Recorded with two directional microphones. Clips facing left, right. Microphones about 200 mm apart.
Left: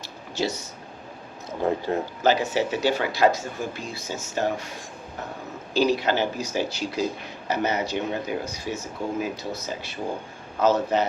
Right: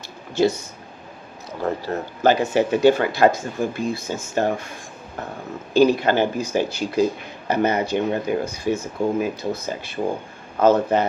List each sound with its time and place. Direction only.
0.3 s speech: 55° right (ahead or behind)
1.6 s speech: 15° left (ahead or behind)
2.2 s speech: 55° right (ahead or behind)
5.7 s speech: 55° right (ahead or behind)